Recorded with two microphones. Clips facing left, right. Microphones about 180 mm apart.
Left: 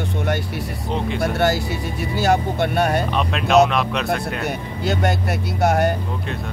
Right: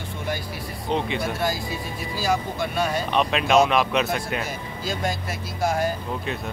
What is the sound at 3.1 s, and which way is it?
Speech, centre (ahead or behind).